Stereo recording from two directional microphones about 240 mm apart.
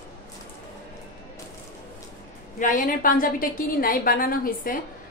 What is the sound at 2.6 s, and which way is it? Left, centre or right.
A woman's voice, left.